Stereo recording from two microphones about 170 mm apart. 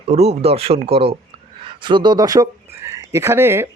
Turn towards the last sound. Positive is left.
turn(degrees=-15)  # may be behind; listen again after turning